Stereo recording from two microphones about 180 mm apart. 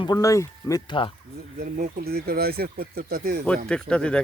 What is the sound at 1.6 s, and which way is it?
Speech, 55° right (ahead or behind).